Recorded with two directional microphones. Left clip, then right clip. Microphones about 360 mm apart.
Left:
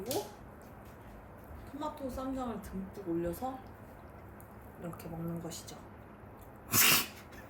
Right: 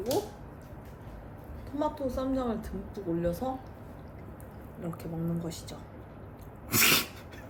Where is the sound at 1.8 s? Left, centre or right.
Centre.